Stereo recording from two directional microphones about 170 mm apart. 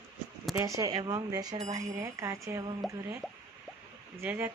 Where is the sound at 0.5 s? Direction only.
20° right (ahead or behind).